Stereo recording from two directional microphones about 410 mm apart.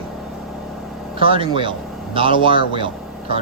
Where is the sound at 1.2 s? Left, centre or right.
Centre.